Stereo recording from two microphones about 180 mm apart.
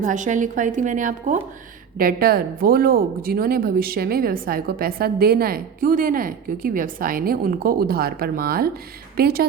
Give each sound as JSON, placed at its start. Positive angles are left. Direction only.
{"t": 0.0, "sound": "a woman's voice", "side_deg": -45}
{"t": 2.0, "sound": "speech", "side_deg": -55}